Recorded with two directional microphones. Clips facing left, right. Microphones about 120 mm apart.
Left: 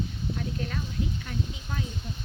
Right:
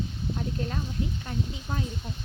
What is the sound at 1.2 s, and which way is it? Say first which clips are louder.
Speech: right 2 dB; 25° right (ahead or behind).